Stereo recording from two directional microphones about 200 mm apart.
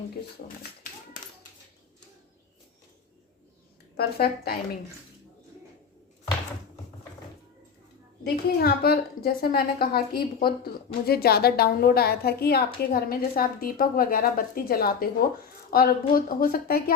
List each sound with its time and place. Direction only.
3.9 s a woman's voice: 50° left (ahead or behind)
8.2 s a woman's voice: 50° left (ahead or behind)